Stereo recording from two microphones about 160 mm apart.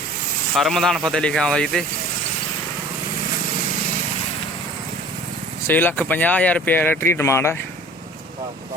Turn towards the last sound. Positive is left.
turn(degrees=15)  # may be behind; listen again after turning